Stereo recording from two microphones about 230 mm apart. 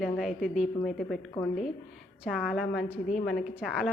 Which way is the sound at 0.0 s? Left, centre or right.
Centre.